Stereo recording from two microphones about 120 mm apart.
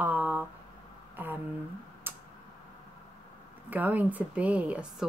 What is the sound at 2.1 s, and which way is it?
Tick-tock, 15° right (ahead or behind).